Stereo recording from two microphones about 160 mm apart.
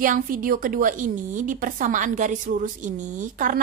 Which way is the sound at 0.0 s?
60° right (ahead or behind).